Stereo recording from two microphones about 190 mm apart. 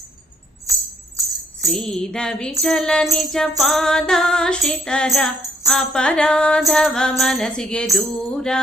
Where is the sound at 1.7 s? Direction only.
Centre (ahead or behind).